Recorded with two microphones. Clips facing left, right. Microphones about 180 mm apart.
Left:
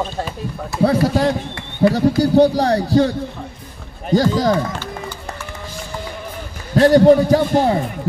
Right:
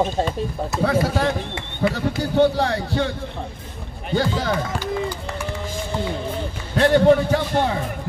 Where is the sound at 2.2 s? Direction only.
35° left (ahead or behind).